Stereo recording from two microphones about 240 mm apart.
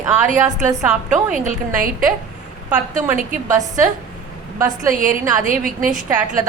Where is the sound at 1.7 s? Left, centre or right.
Right.